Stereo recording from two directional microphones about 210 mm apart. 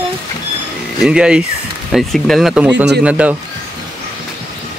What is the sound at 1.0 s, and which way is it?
Speech, 5° right (ahead or behind).